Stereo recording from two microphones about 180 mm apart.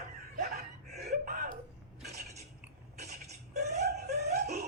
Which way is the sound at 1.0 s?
50° right (ahead or behind).